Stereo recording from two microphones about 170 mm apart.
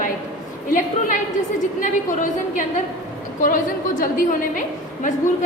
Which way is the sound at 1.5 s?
45° left (ahead or behind).